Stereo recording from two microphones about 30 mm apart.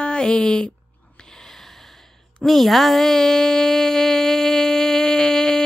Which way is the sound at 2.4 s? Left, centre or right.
Centre.